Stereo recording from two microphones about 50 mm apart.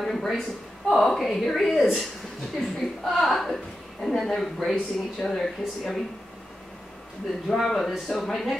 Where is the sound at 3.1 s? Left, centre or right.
Centre.